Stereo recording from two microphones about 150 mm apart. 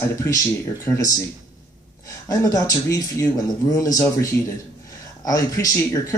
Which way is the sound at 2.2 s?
25° left (ahead or behind).